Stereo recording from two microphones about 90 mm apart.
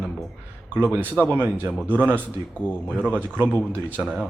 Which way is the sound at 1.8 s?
20° right (ahead or behind).